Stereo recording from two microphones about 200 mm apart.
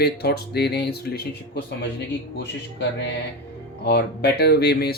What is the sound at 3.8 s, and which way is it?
Speech, 55° left (ahead or behind).